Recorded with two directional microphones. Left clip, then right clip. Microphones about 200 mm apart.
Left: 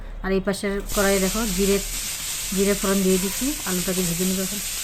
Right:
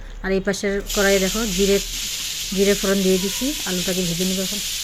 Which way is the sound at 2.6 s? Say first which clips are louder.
Right 3 dB; 5° right (ahead or behind).